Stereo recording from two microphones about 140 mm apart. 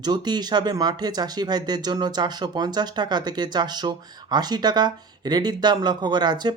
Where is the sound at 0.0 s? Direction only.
30° right (ahead or behind).